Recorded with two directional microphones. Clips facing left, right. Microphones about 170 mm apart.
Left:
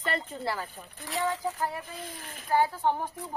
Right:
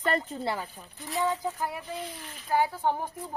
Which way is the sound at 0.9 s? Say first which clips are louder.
Right 2 dB; 85° left.